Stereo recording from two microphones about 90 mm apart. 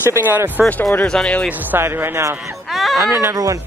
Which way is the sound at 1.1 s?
10° left (ahead or behind).